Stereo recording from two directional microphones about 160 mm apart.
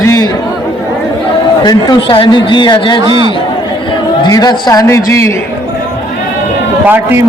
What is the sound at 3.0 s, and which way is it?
Speech, 25° right (ahead or behind).